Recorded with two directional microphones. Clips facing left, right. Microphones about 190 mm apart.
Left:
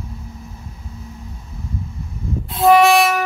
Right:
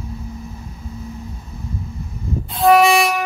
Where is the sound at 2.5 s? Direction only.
Centre (ahead or behind).